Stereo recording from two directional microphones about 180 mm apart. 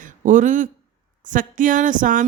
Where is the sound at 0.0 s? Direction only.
45° right (ahead or behind).